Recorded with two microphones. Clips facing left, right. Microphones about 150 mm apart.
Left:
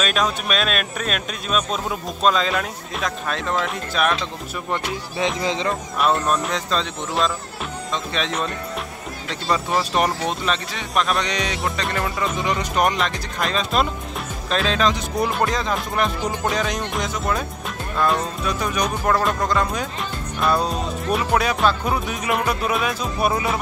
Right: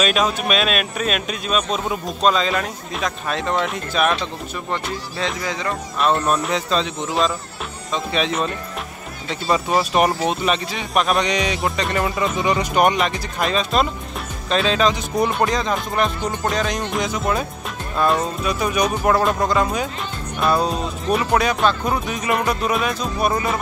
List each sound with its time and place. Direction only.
0.0 s speech: 5° right (ahead or behind)
4.6 s music: 20° left (ahead or behind)
6.2 s speech: 5° right (ahead or behind)
7.9 s speech: 5° right (ahead or behind)
12.7 s speech: 5° right (ahead or behind)